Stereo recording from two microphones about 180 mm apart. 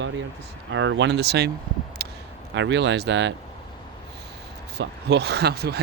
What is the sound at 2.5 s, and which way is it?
Speech, 85° right.